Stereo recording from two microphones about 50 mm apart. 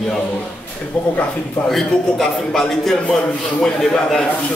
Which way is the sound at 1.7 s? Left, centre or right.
Centre.